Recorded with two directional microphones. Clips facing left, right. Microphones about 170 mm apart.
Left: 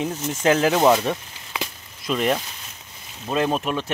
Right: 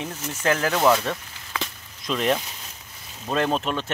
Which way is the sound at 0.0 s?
20° left (ahead or behind).